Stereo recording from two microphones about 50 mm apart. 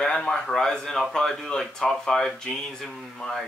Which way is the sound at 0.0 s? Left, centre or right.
Centre.